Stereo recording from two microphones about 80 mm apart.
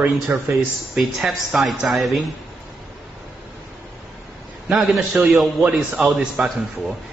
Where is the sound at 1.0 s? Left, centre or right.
Centre.